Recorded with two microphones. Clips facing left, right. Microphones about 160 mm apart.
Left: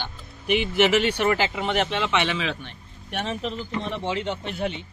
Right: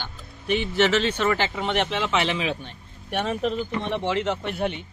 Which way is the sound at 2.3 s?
15° right (ahead or behind).